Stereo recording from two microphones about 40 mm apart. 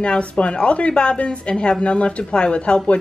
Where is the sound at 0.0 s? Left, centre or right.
Left.